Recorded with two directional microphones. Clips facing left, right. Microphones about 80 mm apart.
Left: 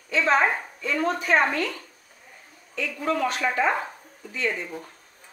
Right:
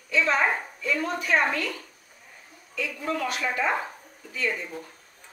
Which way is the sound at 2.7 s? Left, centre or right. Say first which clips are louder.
Left 3 dB; left.